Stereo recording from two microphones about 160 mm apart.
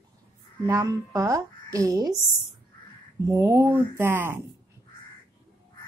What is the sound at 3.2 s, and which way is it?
Speech, 15° right (ahead or behind).